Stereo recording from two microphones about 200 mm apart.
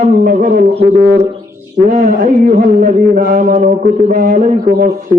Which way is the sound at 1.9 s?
35° right (ahead or behind).